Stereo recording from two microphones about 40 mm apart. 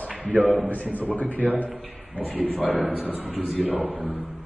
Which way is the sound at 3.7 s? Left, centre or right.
Right.